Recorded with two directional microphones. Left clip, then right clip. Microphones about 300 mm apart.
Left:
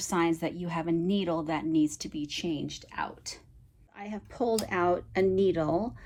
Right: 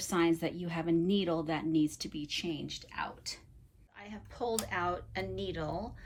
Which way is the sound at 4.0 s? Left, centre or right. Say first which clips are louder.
Left 8 dB; centre.